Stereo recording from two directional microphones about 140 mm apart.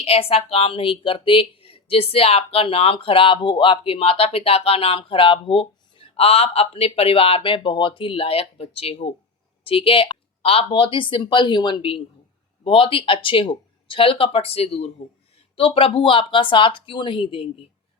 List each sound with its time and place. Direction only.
0.0 s a woman's voice: 45° left (ahead or behind)